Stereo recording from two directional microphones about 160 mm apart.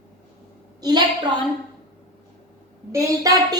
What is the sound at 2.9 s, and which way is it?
Speech, 20° right (ahead or behind).